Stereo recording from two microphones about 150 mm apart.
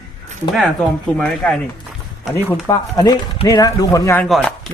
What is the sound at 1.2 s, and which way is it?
Speech, 5° left (ahead or behind).